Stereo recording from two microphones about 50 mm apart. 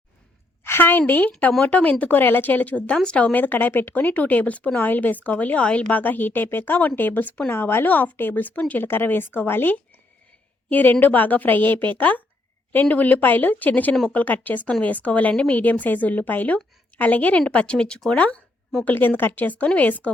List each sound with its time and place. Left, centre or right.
0.6 s speech: left
3.3 s speech: left
4.0 s speech: left
7.5 s speech: left
8.8 s a woman's voice: left; by 18.0 s centre
18.9 s speech: left